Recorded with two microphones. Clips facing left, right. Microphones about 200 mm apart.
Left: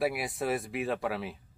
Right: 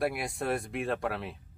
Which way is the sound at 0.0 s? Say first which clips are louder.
Left 1 dB; centre (ahead or behind).